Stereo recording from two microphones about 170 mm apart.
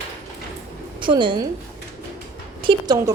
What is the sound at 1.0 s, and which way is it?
Speech, 30° right (ahead or behind).